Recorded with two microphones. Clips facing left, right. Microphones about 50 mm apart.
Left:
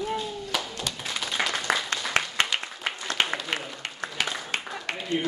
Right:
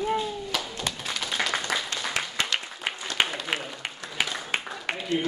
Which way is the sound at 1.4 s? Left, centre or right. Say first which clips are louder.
Left 1 dB; centre.